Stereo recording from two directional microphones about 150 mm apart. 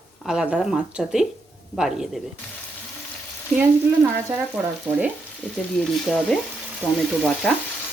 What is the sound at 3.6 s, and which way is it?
Speech, 20° right (ahead or behind).